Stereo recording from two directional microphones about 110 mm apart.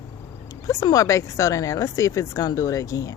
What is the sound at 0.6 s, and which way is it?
A woman's voice, 30° left (ahead or behind).